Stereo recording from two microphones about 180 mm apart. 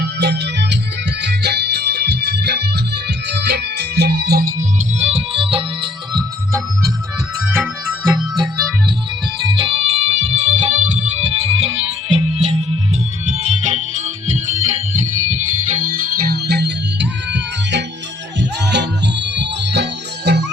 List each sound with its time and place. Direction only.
0.0 s music: 65° right (ahead or behind)
4.9 s music: 35° right (ahead or behind)
8.0 s music: 10° right (ahead or behind)
9.4 s music: 25° right (ahead or behind)
15.8 s music: 50° right (ahead or behind); by 20.4 s 70° right (ahead or behind)